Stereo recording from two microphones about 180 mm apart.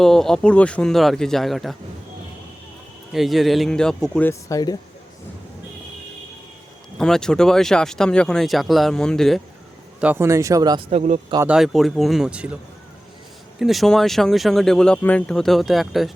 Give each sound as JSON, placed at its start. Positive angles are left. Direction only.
{"t": 0.0, "sound": "speech", "side_deg": 0}
{"t": 3.1, "sound": "speech", "side_deg": 0}
{"t": 7.0, "sound": "speech", "side_deg": 5}
{"t": 10.0, "sound": "speech", "side_deg": -10}
{"t": 11.4, "sound": "speech", "side_deg": -5}
{"t": 13.6, "sound": "speech", "side_deg": 0}